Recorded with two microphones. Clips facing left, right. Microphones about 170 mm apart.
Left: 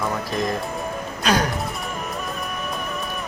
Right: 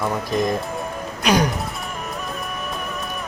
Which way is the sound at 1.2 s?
10° right (ahead or behind).